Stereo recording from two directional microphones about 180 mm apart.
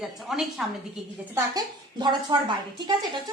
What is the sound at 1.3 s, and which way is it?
A woman's voice, 20° right (ahead or behind).